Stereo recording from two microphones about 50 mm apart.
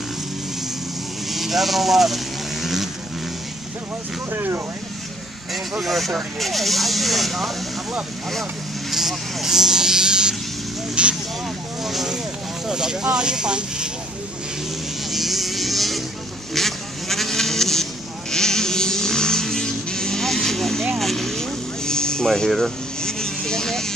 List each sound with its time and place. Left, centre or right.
1.3 s vehicle: centre
4.3 s speech: right
5.5 s speech: centre
8.9 s a sound: centre
11.0 s speech: right
11.8 s speech: centre
15.0 s vehicle: centre
16.5 s a sound: centre
18.3 s vehicle: centre